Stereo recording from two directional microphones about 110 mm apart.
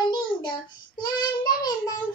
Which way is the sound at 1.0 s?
35° left (ahead or behind).